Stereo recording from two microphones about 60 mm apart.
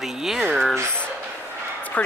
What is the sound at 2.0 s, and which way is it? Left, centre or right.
Speech, left.